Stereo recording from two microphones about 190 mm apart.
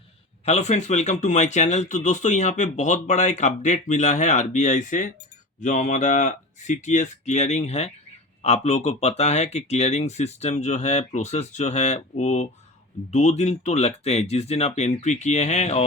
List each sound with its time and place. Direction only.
0.4 s speech: 35° left (ahead or behind)